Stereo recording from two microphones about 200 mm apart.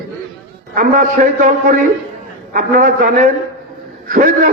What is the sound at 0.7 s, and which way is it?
A man's voice, 40° right (ahead or behind).